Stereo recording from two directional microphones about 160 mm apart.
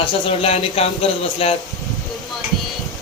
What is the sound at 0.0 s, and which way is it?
A man's voice, 35° left (ahead or behind).